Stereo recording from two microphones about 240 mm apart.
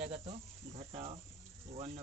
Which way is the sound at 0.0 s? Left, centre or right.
Right.